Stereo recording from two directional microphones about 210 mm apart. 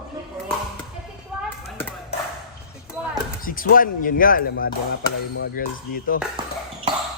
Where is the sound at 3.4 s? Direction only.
40° left (ahead or behind).